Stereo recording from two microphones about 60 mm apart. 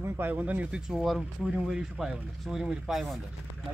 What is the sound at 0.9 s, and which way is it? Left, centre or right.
Speech, centre.